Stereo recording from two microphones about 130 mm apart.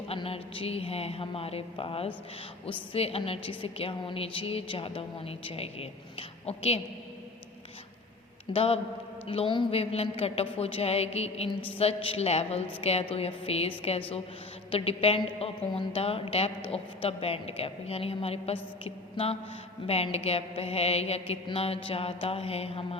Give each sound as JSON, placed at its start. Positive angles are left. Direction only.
{"t": 0.1, "sound": "a woman's voice", "side_deg": 45}
{"t": 8.5, "sound": "a woman's voice", "side_deg": 50}